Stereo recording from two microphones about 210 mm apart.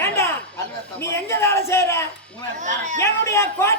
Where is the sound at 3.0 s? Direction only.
10° left (ahead or behind).